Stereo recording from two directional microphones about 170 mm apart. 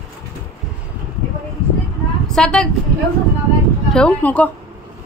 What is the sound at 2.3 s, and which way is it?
Speech, 5° left (ahead or behind).